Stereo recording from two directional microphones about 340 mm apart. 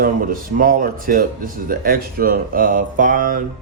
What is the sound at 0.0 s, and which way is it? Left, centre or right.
Speech, right.